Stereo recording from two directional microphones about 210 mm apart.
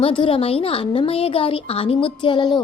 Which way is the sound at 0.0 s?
25° left (ahead or behind).